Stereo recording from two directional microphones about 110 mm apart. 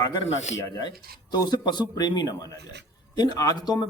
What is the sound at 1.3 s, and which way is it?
A man's voice, 40° left (ahead or behind).